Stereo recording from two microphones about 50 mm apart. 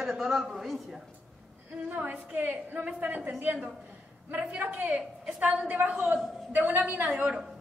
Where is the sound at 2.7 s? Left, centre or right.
Right.